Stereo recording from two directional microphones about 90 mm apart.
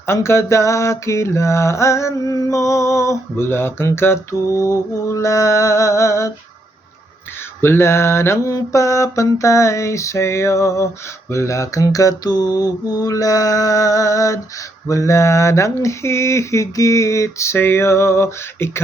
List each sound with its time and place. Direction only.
0.1 s mantra: 30° left (ahead or behind)
7.6 s mantra: 30° left (ahead or behind)